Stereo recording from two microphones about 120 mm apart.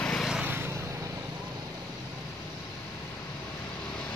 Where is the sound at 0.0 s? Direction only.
5° left (ahead or behind).